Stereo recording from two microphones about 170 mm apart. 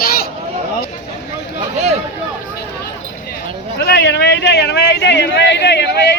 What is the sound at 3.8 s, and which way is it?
A man's voice, 75° left (ahead or behind).